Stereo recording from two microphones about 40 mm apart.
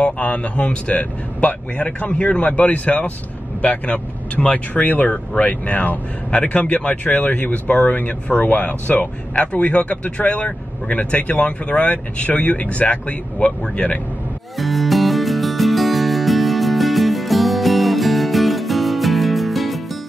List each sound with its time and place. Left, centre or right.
0.0 s speech: left
6.3 s speech: left
9.0 s speech: left
11.9 s speech: left
14.6 s music: centre